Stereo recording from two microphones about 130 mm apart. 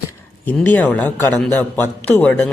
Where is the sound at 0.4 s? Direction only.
15° left (ahead or behind).